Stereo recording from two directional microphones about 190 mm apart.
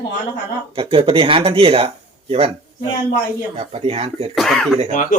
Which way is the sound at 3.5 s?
30° right (ahead or behind).